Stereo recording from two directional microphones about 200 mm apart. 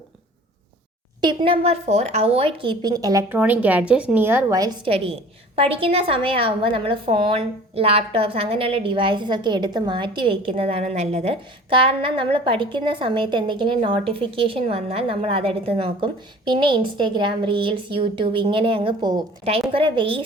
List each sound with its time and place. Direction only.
1.2 s a woman's voice: 25° right (ahead or behind)
5.5 s a woman's voice: 30° right (ahead or behind)